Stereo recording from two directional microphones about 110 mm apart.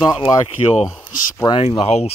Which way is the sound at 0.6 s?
55° left (ahead or behind).